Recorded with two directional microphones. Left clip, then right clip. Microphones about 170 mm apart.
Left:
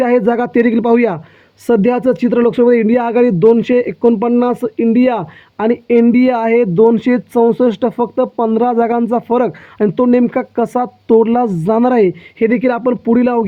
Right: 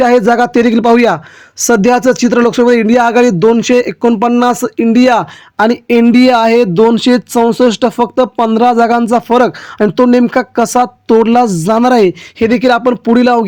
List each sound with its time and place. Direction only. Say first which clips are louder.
0.0 s speech: right 5 dB; 30° right (ahead or behind)